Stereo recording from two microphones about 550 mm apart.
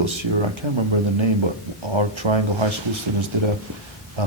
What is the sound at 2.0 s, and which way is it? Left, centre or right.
Speech, right.